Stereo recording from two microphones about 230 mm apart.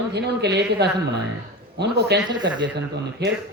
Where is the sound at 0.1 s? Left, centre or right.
Right.